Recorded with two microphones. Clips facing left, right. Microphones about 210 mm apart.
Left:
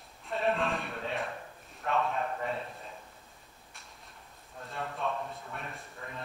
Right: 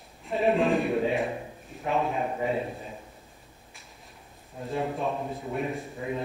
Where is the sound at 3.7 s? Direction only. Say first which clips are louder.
Right 1 dB; centre (ahead or behind).